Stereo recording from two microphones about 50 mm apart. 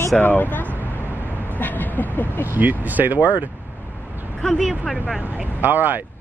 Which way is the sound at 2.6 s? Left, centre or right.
Right.